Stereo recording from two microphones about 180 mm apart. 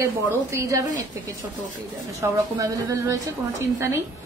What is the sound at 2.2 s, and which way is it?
A woman's voice, 15° right (ahead or behind).